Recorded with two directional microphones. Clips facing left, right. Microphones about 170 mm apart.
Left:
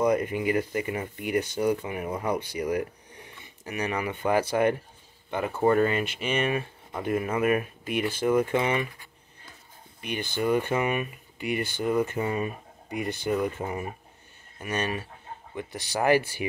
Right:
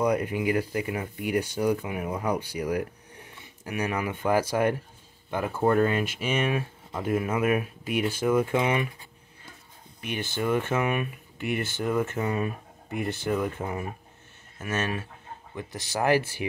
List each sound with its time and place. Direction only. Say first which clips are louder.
0.0 s speech: left 1 dB; 5° right (ahead or behind)
10.0 s speech: left 1 dB; 5° right (ahead or behind)